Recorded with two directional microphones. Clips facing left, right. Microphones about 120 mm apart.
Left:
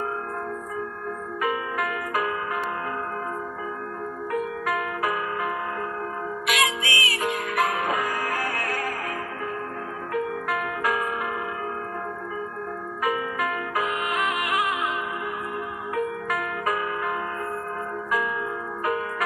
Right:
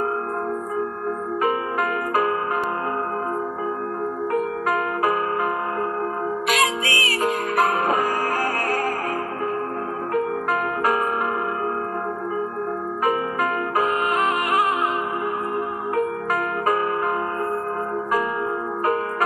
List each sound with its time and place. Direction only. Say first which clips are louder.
1.4 s music: right 3 dB; 40° right (ahead or behind)
4.3 s music: right 3 dB; 40° right (ahead or behind)
10.1 s music: right 4 dB; 40° right (ahead or behind)
13.0 s music: right 3 dB; 40° right (ahead or behind)
15.9 s music: right 4 dB; 40° right (ahead or behind)